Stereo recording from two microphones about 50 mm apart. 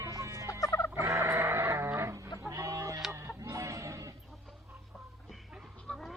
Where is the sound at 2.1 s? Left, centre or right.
Right.